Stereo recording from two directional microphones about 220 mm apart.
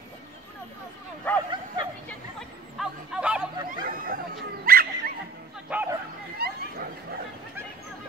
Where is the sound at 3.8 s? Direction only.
40° right (ahead or behind).